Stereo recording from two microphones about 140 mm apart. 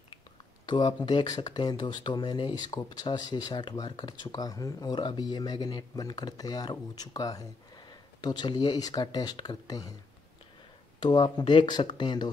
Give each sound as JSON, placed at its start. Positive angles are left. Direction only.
{"t": 0.7, "sound": "speech", "side_deg": 30}
{"t": 11.0, "sound": "speech", "side_deg": 35}